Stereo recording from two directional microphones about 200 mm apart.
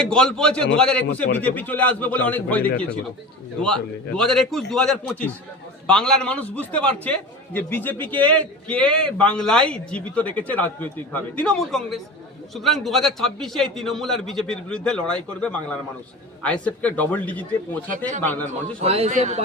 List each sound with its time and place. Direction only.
0.0 s a man's voice: 5° left (ahead or behind)
17.8 s speech: 40° right (ahead or behind)
18.2 s a man's voice: 10° left (ahead or behind)
18.8 s speech: 30° right (ahead or behind)